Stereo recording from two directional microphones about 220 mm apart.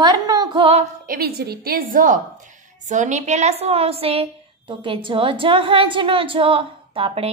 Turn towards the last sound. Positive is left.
turn(degrees=-25)  # may be behind; listen again after turning